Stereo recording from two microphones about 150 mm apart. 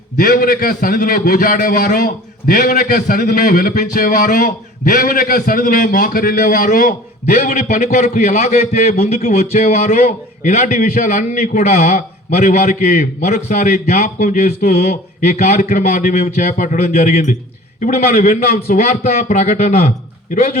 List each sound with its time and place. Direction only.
0.2 s a man's voice: 70° left (ahead or behind); by 10.7 s 50° left (ahead or behind)
10.7 s a man's voice: 65° left (ahead or behind)
20.3 s a man's voice: 65° left (ahead or behind)